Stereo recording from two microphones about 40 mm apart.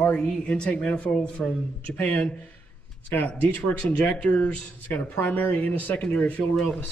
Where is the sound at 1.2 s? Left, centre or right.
Left.